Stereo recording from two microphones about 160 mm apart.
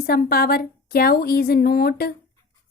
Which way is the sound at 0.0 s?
70° left (ahead or behind).